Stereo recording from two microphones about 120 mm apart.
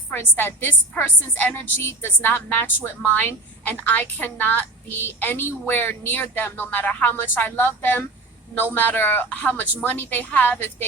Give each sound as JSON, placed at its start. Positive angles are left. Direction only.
{"t": 0.1, "sound": "a woman's voice", "side_deg": 15}